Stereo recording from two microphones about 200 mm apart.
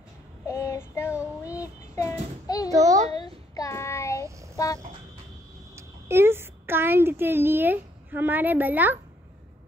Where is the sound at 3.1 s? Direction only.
20° left (ahead or behind).